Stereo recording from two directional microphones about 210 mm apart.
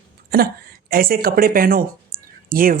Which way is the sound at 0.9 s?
45° right (ahead or behind).